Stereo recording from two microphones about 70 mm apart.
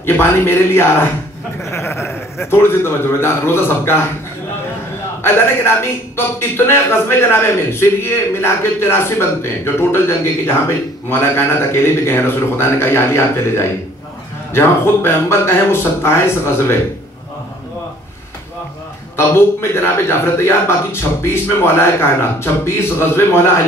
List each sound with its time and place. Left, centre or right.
0.0 s a man's voice: left
5.2 s a man's voice: left
19.1 s a man's voice: left